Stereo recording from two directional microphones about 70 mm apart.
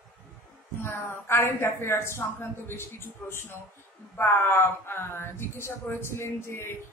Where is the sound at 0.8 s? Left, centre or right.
Left.